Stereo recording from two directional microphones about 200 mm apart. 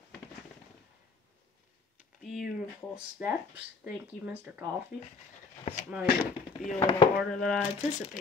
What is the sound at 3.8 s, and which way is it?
Speech, 5° right (ahead or behind).